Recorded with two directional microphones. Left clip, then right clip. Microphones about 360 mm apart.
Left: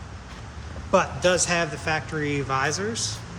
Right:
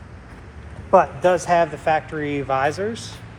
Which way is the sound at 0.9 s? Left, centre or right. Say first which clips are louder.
Right 5 dB; centre.